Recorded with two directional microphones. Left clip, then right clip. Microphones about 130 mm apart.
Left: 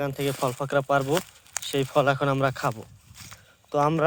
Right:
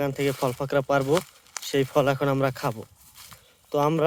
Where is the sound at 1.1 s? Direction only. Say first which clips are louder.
Right 2 dB; 90° left.